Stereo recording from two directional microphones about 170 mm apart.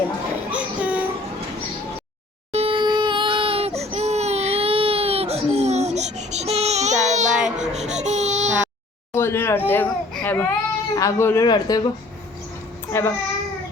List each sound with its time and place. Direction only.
0.5 s train: 10° right (ahead or behind)
2.5 s crying: 35° right (ahead or behind)
7.3 s a sound: 5° right (ahead or behind)
7.6 s baby cry: 45° right (ahead or behind)
9.1 s speech: 15° left (ahead or behind)
12.9 s a child's voice: 15° left (ahead or behind)